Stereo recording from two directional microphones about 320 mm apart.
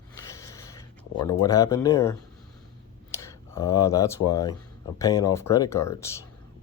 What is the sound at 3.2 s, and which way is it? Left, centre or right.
Speech, centre.